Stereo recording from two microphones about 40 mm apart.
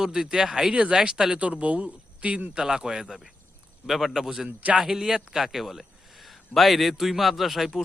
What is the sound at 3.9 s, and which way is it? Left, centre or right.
Speech, centre.